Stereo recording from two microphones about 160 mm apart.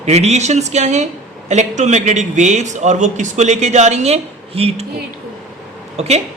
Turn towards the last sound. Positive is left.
turn(degrees=-40)  # may be behind; listen again after turning